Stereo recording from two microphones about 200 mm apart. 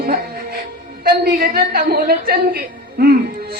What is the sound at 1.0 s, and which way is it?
A woman's voice, 50° right (ahead or behind).